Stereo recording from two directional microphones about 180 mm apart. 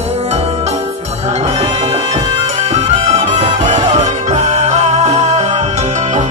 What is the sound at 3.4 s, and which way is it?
Music, 45° right (ahead or behind).